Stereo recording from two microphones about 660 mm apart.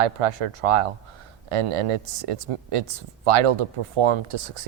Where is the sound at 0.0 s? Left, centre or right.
Right.